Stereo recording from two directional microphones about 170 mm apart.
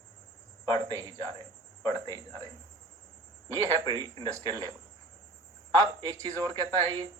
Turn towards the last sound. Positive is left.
turn(degrees=-25)  # may be behind; listen again after turning